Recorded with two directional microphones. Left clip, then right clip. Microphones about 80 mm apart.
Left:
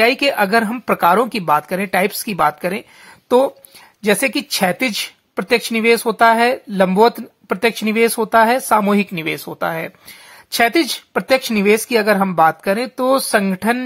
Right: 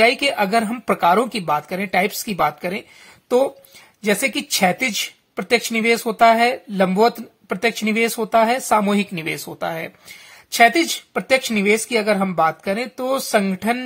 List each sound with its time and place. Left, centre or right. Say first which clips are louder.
0.0 s speech: left 2 dB; left
0.9 s speech: left 3 dB; left
8.5 s speech: left 3 dB; left